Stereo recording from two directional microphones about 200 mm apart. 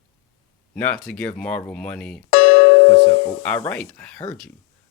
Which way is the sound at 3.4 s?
10° left (ahead or behind).